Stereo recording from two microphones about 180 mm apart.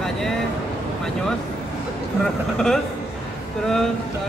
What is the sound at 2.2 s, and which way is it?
Speech, centre (ahead or behind).